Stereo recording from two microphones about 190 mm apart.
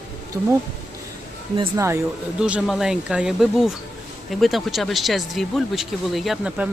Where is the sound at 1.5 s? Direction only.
15° right (ahead or behind).